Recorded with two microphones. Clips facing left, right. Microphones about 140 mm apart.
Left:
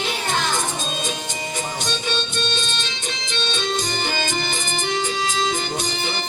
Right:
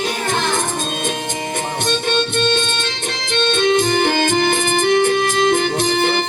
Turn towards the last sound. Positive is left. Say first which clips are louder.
# right 9 dB
turn(degrees=-55)  # may be behind; listen again after turning